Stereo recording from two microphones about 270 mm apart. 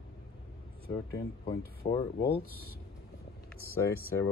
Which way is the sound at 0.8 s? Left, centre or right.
Left.